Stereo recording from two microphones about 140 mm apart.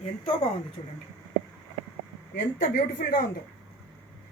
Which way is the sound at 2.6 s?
70° left (ahead or behind).